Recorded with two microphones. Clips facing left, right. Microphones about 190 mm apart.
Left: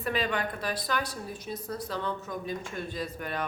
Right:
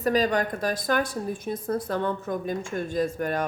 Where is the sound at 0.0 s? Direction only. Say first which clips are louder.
Right 7 dB; 40° right (ahead or behind).